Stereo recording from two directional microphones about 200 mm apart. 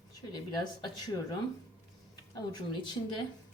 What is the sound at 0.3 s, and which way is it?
Speech, 20° left (ahead or behind).